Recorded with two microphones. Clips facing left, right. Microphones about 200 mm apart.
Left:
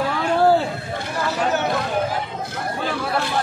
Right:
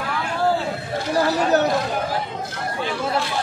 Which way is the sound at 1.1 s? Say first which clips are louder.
Right 4 dB; 35° right (ahead or behind).